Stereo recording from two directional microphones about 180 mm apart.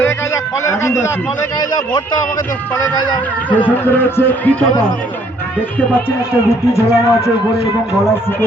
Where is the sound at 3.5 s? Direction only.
10° left (ahead or behind).